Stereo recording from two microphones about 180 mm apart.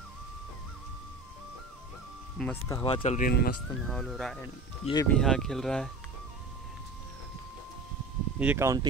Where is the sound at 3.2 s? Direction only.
55° left (ahead or behind).